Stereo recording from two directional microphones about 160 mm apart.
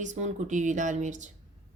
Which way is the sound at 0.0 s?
50° right (ahead or behind).